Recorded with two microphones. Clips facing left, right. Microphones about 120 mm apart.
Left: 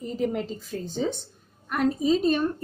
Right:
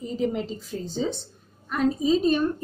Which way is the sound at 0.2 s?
55° left (ahead or behind).